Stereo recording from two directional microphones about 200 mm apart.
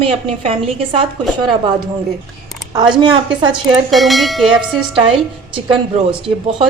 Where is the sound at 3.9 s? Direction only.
Centre (ahead or behind).